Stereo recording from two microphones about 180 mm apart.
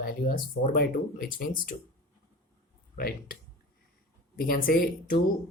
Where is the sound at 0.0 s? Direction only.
55° left (ahead or behind).